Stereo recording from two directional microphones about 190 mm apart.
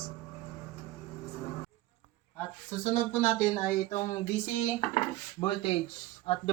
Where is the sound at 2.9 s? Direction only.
10° left (ahead or behind).